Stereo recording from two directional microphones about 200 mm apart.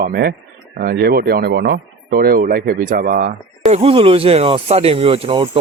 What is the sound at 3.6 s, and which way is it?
Speech, 30° right (ahead or behind).